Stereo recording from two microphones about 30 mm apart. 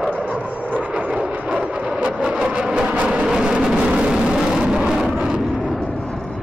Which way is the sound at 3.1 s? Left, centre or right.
Centre.